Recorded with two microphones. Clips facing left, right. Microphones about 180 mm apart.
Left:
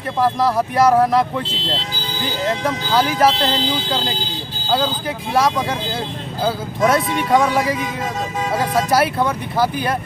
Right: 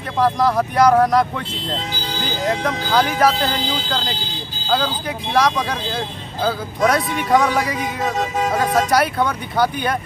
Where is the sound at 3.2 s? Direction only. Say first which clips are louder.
Left 1 dB; 25° left (ahead or behind).